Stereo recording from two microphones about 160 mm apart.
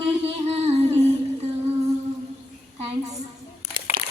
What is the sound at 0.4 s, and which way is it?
Music, 40° right (ahead or behind).